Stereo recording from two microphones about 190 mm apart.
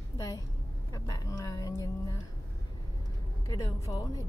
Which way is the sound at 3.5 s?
15° left (ahead or behind).